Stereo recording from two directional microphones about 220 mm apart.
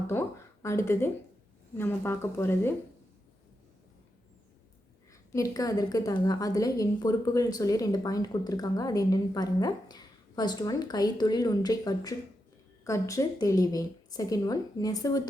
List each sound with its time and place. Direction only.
0.1 s a woman's voice: 10° left (ahead or behind)
5.3 s a woman's voice: 15° left (ahead or behind)